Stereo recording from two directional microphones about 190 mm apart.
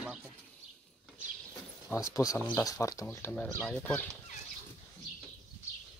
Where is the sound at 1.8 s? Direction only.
15° left (ahead or behind).